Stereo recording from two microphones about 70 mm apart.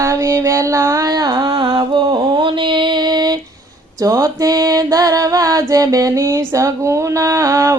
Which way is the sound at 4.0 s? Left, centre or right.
Right.